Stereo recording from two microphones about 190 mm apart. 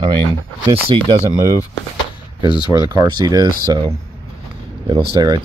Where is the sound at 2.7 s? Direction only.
20° right (ahead or behind).